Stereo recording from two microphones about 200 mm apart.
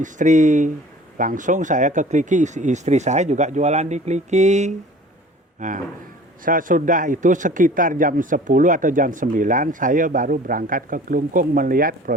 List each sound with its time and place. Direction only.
0.0 s speech: 40° right (ahead or behind)